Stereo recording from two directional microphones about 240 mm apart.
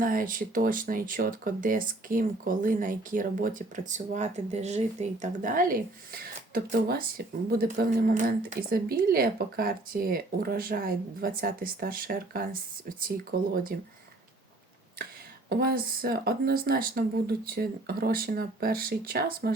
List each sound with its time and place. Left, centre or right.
0.0 s speech: right
15.4 s speech: right